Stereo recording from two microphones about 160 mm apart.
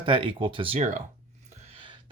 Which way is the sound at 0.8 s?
50° right (ahead or behind).